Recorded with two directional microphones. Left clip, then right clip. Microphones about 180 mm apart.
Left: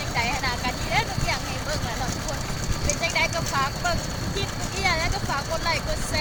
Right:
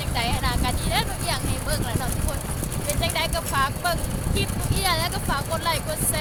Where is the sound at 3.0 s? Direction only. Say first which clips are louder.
Left 1 dB; 10° right (ahead or behind).